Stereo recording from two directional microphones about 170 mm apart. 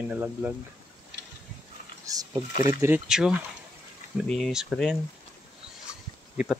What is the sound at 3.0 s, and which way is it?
Speech, 5° right (ahead or behind).